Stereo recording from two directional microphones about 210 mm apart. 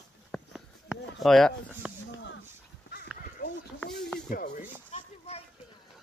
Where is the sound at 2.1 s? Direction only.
60° left (ahead or behind).